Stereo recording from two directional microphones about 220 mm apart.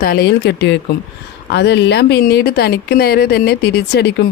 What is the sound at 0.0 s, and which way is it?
Speech, 40° left (ahead or behind).